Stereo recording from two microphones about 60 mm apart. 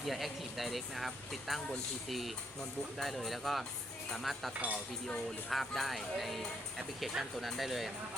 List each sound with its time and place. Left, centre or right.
0.0 s speech: centre
4.5 s speech: right
5.5 s speech: centre